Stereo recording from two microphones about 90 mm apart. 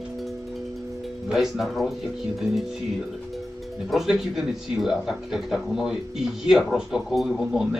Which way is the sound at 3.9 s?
5° right (ahead or behind).